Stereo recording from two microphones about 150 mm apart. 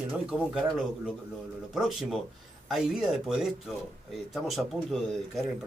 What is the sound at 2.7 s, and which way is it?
Speech, 5° right (ahead or behind).